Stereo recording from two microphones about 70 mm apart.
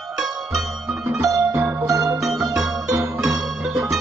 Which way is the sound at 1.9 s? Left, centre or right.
Right.